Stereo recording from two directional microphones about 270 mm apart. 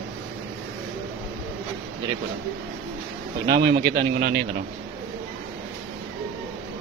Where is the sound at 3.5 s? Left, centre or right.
Right.